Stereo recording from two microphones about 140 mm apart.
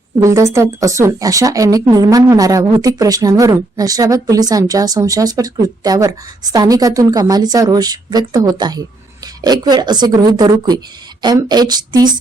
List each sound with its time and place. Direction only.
0.2 s a woman's voice: 20° right (ahead or behind)